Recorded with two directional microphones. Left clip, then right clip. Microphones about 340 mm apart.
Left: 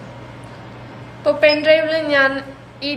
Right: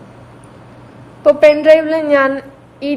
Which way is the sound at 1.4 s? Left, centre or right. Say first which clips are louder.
Right 4 dB; centre.